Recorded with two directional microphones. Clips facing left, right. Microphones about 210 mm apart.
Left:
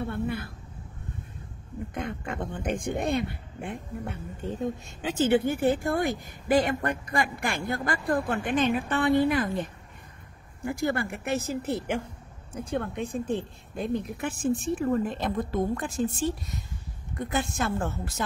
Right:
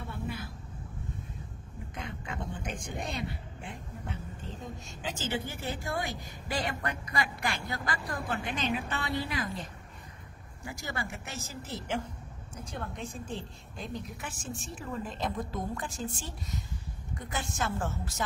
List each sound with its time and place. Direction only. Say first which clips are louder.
0.0 s a sound: left 8 dB; 60° left (ahead or behind)
2.0 s a woman's voice: left 6 dB; 55° left (ahead or behind)
17.2 s a woman's voice: left 7 dB; 60° left (ahead or behind)